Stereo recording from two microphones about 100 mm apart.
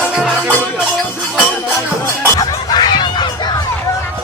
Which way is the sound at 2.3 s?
45° left (ahead or behind).